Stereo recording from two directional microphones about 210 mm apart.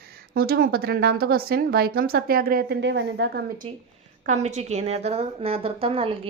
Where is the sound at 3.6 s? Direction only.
30° right (ahead or behind).